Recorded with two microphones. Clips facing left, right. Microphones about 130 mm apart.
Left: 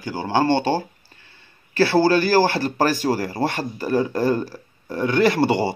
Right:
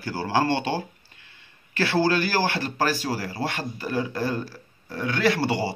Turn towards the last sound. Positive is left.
turn(degrees=55)  # may be behind; listen again after turning